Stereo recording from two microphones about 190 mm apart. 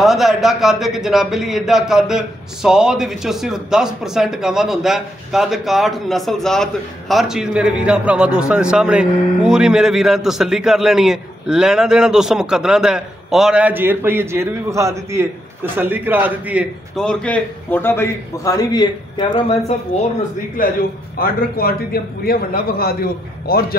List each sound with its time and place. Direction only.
0.0 s a man's voice: centre (ahead or behind)
16.9 s a man's voice: 5° left (ahead or behind); by 19.4 s 25° left (ahead or behind)
20.6 s a man's voice: 45° left (ahead or behind)